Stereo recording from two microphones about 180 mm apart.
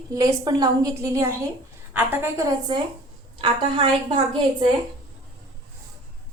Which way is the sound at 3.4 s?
30° right (ahead or behind).